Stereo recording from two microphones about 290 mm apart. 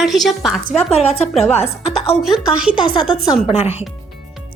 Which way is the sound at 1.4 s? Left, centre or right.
Left.